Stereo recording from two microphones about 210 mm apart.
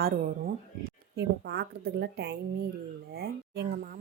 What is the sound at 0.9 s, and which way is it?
A woman's voice, 50° right (ahead or behind).